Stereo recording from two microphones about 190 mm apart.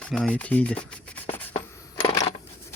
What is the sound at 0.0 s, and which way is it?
Rub, 5° left (ahead or behind).